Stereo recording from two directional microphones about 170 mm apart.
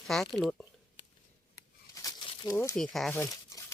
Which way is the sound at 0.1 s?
Centre (ahead or behind).